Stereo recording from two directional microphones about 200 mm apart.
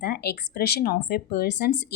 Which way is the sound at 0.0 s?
50° left (ahead or behind).